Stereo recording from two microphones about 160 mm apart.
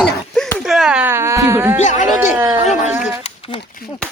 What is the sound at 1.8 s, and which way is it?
Speech, 50° left (ahead or behind).